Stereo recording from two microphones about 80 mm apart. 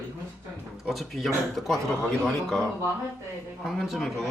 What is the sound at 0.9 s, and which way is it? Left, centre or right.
A man's voice, centre.